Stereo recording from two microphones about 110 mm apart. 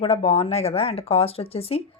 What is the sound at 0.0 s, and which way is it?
Speech, 60° left (ahead or behind).